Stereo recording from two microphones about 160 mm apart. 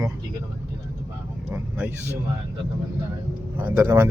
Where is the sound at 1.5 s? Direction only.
10° right (ahead or behind).